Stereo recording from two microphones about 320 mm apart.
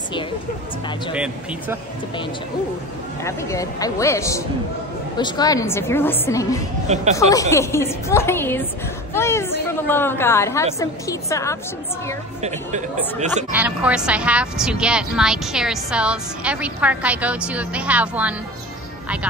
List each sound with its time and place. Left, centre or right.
1.1 s a woman's voice: centre
3.3 s a woman's voice: centre
12.4 s speech: right
13.5 s a woman's voice: centre